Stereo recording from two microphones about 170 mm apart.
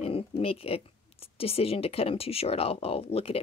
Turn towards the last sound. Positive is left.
turn(degrees=35)  # may be behind; listen again after turning